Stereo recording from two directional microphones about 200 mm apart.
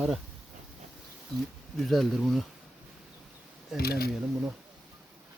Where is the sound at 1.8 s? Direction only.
Centre (ahead or behind).